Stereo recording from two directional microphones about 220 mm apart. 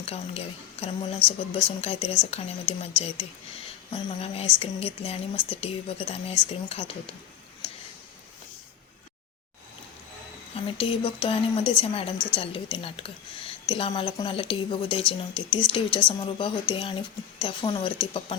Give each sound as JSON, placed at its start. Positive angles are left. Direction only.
{"t": 0.0, "sound": "a woman's voice", "side_deg": 30}
{"t": 7.6, "sound": "a sound", "side_deg": 25}
{"t": 10.5, "sound": "a woman's voice", "side_deg": 25}